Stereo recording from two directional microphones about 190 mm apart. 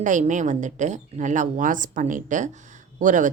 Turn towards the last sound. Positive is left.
turn(degrees=-40)  # may be behind; listen again after turning